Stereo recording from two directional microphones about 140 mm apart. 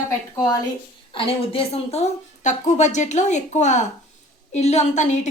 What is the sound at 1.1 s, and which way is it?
A woman's voice, 40° left (ahead or behind).